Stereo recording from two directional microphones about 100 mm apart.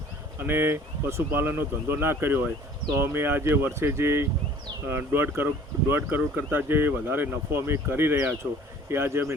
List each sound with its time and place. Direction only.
0.3 s speech: 20° right (ahead or behind)